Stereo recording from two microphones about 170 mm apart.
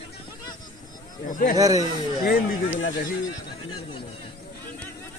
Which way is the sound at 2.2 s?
60° left (ahead or behind).